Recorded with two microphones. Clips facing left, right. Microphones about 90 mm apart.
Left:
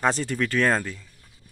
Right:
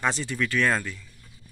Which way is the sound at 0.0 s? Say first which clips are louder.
Left 3 dB; 45° left (ahead or behind).